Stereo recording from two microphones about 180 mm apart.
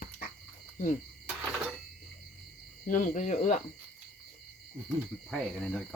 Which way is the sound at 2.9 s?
45° left (ahead or behind).